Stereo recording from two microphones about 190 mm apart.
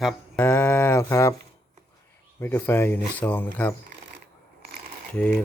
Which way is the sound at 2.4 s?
10° left (ahead or behind).